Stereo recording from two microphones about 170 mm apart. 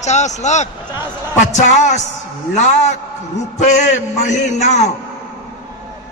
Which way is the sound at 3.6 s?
45° left (ahead or behind).